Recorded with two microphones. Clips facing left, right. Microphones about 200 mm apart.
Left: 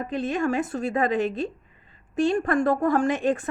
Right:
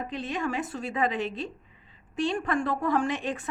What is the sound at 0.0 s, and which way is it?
A woman's voice, 50° left (ahead or behind).